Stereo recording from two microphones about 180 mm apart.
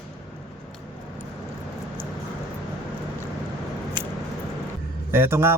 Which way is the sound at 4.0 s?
25° right (ahead or behind).